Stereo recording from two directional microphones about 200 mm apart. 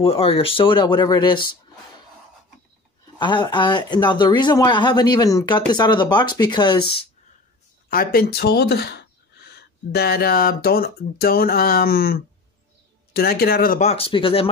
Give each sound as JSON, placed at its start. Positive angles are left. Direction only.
{"t": 0.0, "sound": "speech", "side_deg": 30}
{"t": 3.2, "sound": "speech", "side_deg": 25}
{"t": 7.9, "sound": "speech", "side_deg": 45}
{"t": 13.8, "sound": "speech", "side_deg": 30}